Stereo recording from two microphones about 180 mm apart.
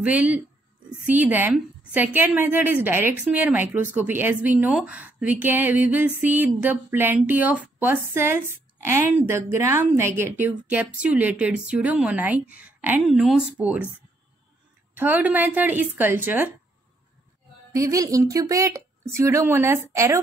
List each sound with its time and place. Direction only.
0.0 s a woman's voice: 10° right (ahead or behind)
15.0 s a woman's voice: 10° right (ahead or behind)
17.7 s a woman's voice: 20° right (ahead or behind)